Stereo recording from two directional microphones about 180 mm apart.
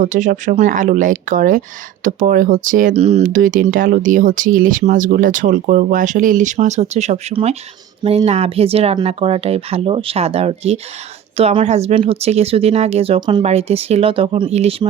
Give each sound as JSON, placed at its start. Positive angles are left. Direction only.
{"t": 0.0, "sound": "speech", "side_deg": -45}
{"t": 13.4, "sound": "speech", "side_deg": -35}